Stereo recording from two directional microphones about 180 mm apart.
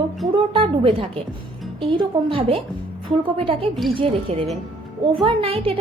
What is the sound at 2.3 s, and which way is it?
A woman's voice, 30° right (ahead or behind).